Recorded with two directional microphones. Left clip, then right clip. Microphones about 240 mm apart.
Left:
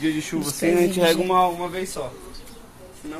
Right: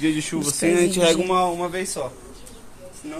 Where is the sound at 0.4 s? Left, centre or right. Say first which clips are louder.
Right 1 dB; right.